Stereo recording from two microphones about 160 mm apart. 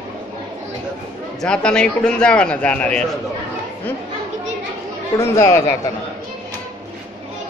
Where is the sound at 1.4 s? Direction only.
5° left (ahead or behind).